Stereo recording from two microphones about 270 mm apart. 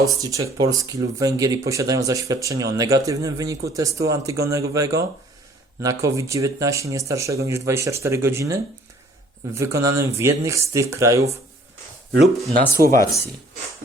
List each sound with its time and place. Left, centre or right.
0.0 s speech: centre
9.6 s speech: centre
12.5 s speech: right